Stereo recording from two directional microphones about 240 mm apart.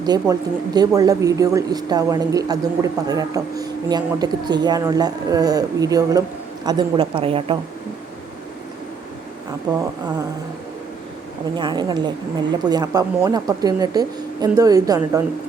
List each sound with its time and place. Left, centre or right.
0.0 s a woman's voice: centre
11.5 s speech: centre